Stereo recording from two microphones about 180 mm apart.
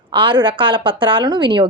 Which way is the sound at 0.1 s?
25° right (ahead or behind).